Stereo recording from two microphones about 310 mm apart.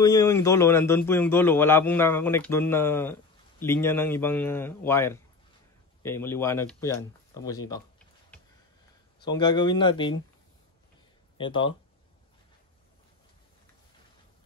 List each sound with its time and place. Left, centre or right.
0.0 s a man's voice: centre
9.2 s a man's voice: centre
11.3 s a man's voice: centre